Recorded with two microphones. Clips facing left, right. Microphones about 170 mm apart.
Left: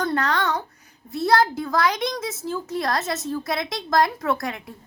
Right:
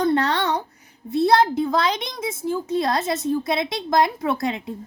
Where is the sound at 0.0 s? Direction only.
25° right (ahead or behind).